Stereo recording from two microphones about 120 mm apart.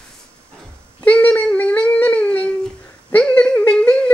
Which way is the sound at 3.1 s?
15° left (ahead or behind).